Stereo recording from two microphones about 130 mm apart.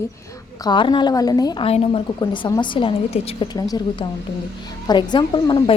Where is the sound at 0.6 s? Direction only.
35° left (ahead or behind).